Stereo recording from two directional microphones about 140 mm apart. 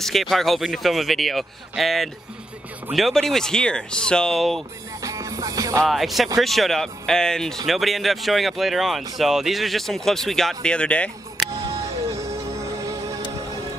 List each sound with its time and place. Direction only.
0.0 s speech: centre (ahead or behind)
5.0 s music: 20° right (ahead or behind)
5.9 s speech: centre (ahead or behind)